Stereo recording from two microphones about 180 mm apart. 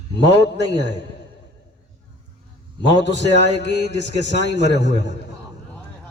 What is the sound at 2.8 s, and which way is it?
A man's voice, 75° left (ahead or behind).